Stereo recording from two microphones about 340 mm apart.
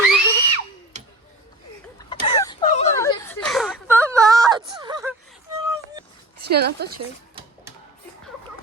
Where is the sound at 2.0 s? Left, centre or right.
Centre.